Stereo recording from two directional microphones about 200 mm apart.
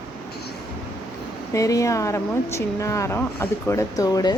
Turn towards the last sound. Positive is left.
turn(degrees=20)  # may be behind; listen again after turning